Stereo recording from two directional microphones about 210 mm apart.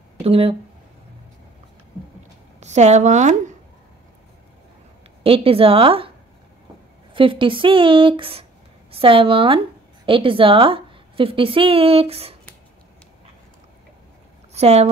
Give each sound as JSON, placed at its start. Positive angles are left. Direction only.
{"t": 0.2, "sound": "speech", "side_deg": -25}
{"t": 2.6, "sound": "a woman's voice", "side_deg": -30}
{"t": 5.2, "sound": "speech", "side_deg": -25}
{"t": 7.2, "sound": "a woman's voice", "side_deg": -25}
{"t": 14.5, "sound": "speech", "side_deg": -30}